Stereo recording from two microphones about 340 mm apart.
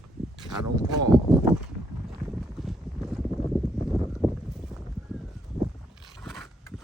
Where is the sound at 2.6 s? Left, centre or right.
Centre.